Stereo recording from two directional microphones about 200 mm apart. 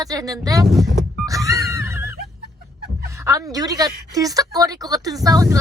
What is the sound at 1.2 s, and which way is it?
Music, 15° right (ahead or behind).